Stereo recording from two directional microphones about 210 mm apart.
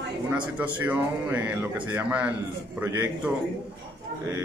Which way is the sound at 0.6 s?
5° right (ahead or behind).